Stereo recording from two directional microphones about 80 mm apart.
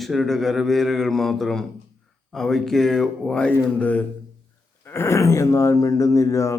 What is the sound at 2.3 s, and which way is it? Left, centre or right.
Speech, centre.